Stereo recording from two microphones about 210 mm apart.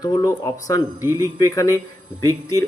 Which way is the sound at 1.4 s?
15° left (ahead or behind).